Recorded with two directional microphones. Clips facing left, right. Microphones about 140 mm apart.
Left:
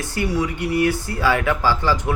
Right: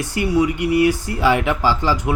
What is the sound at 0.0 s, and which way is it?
Speech, 15° right (ahead or behind).